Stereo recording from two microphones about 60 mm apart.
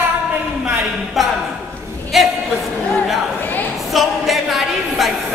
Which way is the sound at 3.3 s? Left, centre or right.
Left.